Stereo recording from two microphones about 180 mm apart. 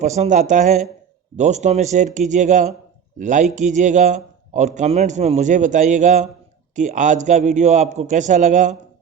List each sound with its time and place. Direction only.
0.0 s a man's voice: 40° right (ahead or behind)